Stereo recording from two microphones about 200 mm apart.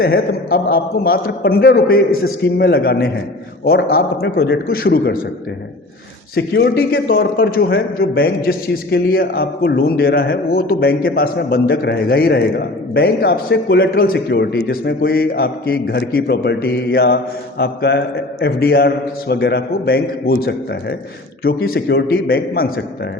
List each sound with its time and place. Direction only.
0.0 s a man's voice: 50° left (ahead or behind)
6.3 s a man's voice: 55° left (ahead or behind)